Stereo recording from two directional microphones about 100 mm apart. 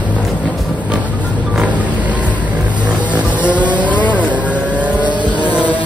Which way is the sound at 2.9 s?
15° right (ahead or behind).